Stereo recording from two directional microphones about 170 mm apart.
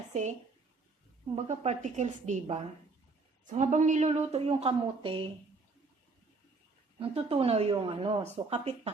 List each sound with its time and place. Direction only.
0.1 s a woman's voice: 45° right (ahead or behind)
1.5 s a woman's voice: 45° right (ahead or behind)
7.0 s a woman's voice: 35° right (ahead or behind)